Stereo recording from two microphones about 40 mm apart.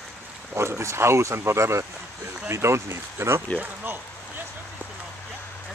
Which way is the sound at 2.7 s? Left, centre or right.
Right.